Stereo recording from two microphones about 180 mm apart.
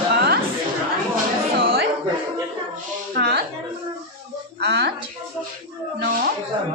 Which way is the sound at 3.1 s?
55° right (ahead or behind).